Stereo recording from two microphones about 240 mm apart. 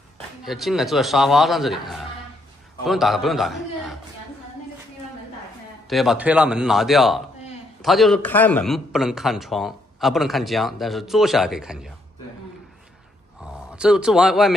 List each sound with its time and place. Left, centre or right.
0.5 s a man's voice: centre
5.9 s a man's voice: centre
13.4 s a man's voice: centre